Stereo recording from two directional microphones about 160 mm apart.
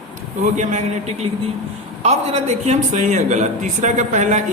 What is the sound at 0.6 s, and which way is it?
Speech, 50° right (ahead or behind).